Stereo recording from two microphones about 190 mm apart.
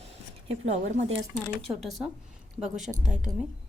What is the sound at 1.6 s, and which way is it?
A woman's voice, centre (ahead or behind).